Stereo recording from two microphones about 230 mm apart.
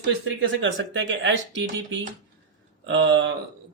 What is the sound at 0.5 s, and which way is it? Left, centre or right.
Speech, right.